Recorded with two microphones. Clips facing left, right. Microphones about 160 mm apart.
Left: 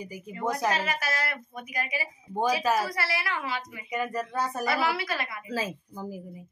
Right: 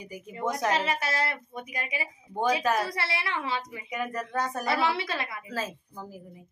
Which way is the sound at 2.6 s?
5° left (ahead or behind).